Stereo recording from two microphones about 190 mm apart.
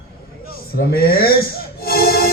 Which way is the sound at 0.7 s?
55° left (ahead or behind).